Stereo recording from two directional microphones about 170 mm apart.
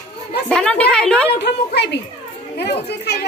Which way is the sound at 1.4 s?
80° left.